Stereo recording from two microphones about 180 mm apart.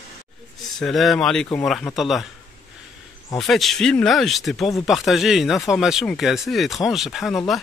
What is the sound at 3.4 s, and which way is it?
Speech, centre (ahead or behind).